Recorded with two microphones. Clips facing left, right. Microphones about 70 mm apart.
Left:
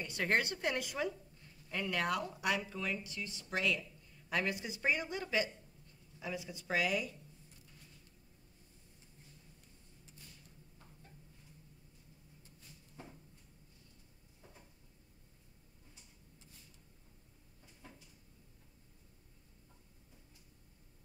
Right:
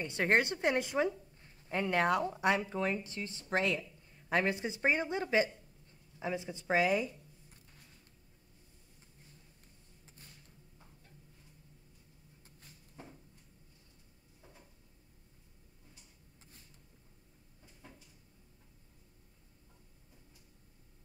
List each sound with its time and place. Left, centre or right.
0.0 s a woman's voice: right